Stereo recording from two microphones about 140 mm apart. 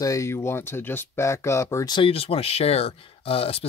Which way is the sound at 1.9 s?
40° left (ahead or behind).